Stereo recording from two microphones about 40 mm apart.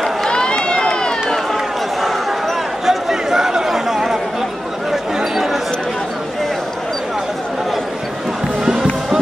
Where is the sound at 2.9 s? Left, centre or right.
Centre.